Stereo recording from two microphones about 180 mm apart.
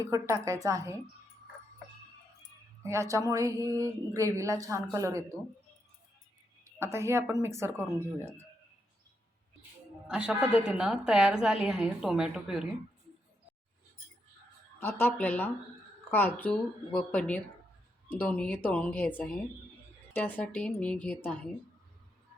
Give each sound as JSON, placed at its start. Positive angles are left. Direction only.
{"t": 0.0, "sound": "speech", "side_deg": -15}
{"t": 2.8, "sound": "speech", "side_deg": -15}
{"t": 6.7, "sound": "speech", "side_deg": -15}
{"t": 10.1, "sound": "a woman's voice", "side_deg": -5}
{"t": 14.8, "sound": "speech", "side_deg": 10}